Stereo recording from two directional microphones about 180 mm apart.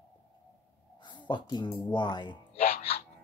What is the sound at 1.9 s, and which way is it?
Speech, 25° left (ahead or behind).